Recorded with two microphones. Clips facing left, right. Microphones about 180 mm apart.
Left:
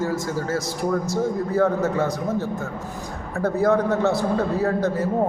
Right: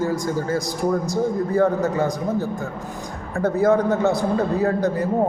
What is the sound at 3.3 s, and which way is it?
A man's voice, centre (ahead or behind).